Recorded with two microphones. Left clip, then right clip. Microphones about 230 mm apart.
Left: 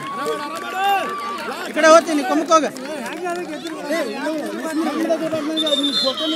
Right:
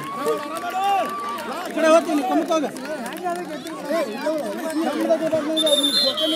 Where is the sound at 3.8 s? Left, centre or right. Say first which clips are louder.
Even; left.